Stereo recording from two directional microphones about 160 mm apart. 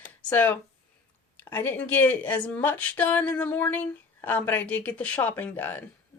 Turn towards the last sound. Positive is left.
turn(degrees=10)  # may be behind; listen again after turning